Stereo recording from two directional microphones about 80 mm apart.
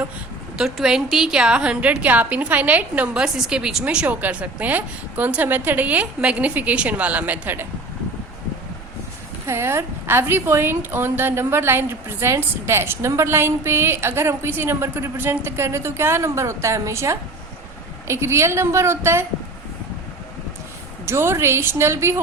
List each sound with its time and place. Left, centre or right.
0.5 s a woman's voice: centre
3.8 s a woman's voice: centre
9.5 s a woman's voice: right
21.1 s a woman's voice: right